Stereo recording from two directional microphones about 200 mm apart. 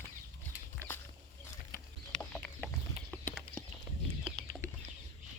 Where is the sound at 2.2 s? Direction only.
Centre (ahead or behind).